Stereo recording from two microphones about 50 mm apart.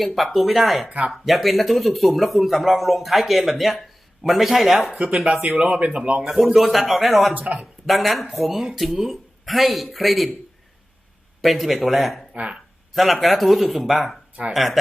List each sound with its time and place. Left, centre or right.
0.0 s speech: centre
0.9 s speech: right
1.1 s speech: centre
5.2 s speech: right
6.3 s speech: centre
7.3 s speech: right
7.6 s speech: centre
11.4 s speech: centre
12.3 s speech: right
12.9 s speech: centre